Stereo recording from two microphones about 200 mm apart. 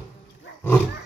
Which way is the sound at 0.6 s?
10° left (ahead or behind).